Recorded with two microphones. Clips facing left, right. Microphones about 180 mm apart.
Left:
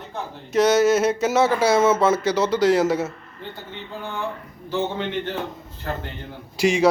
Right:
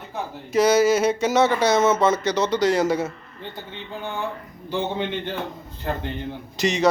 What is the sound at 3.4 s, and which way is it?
Speech, 20° right (ahead or behind).